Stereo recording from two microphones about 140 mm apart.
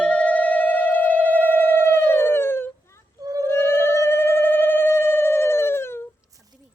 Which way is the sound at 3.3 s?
25° right (ahead or behind).